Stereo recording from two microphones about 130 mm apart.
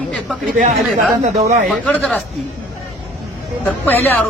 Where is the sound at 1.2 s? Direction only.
60° right (ahead or behind).